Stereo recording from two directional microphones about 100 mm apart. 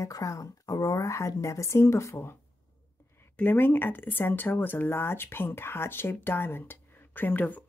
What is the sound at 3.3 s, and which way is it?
Speech, 20° left (ahead or behind).